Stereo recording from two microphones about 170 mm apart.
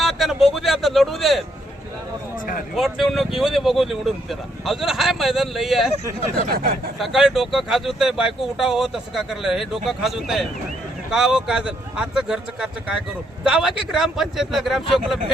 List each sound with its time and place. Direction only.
0.0 s a sound: centre (ahead or behind)
2.7 s speech: centre (ahead or behind)
6.5 s speech: 60° right (ahead or behind)
7.0 s speech: centre (ahead or behind)